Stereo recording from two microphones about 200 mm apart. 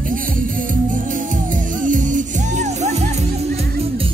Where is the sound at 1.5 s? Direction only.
40° right (ahead or behind).